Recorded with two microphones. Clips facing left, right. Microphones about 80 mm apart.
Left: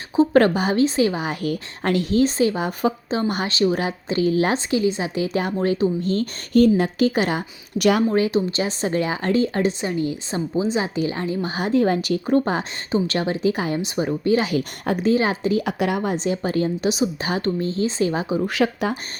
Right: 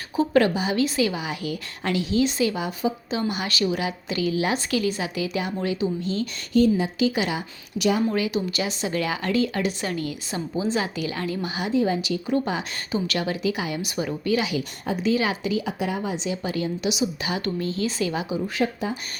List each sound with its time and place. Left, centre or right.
0.2 s speech: left
0.8 s speech: left
3.4 s a woman's voice: left
4.5 s speech: left
8.1 s a woman's voice: left
11.4 s a woman's voice: left
11.7 s a woman's voice: left
14.3 s a woman's voice: left
15.6 s a woman's voice: left
18.4 s speech: left